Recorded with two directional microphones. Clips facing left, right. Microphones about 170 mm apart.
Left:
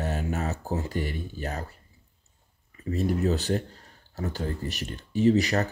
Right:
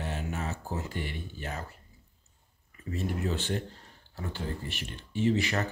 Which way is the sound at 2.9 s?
35° left (ahead or behind).